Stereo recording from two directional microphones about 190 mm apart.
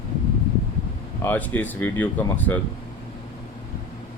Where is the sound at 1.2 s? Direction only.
10° left (ahead or behind).